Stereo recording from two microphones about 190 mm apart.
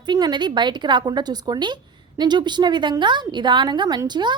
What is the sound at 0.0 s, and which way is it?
A woman's voice, 20° right (ahead or behind).